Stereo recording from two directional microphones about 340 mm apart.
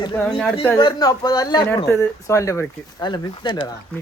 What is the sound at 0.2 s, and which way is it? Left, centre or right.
Speech, centre.